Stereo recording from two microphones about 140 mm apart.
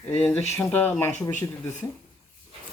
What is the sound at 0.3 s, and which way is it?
Speech, 20° left (ahead or behind).